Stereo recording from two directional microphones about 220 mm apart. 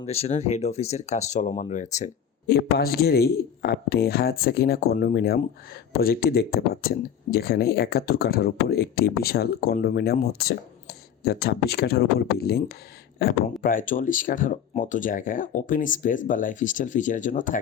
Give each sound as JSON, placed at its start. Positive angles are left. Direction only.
{"t": 0.0, "sound": "speech", "side_deg": 30}
{"t": 2.5, "sound": "speech", "side_deg": 45}